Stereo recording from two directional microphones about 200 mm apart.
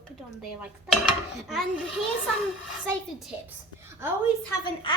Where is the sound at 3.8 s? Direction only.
10° right (ahead or behind).